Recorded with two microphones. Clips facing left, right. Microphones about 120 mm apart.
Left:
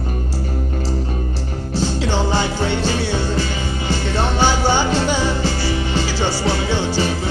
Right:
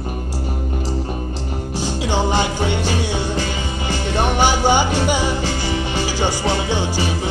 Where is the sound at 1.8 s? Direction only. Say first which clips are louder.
Left 1 dB; 15° right (ahead or behind).